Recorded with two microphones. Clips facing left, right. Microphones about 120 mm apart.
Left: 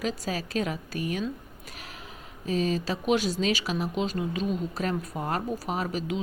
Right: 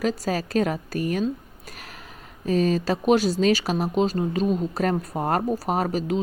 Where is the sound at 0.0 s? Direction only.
45° right (ahead or behind).